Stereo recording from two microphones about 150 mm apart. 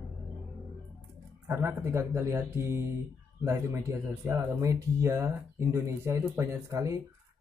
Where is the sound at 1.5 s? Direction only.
20° right (ahead or behind).